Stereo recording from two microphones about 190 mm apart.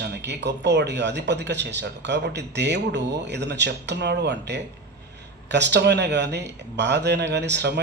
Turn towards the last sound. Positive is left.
turn(degrees=-65)  # may be behind; listen again after turning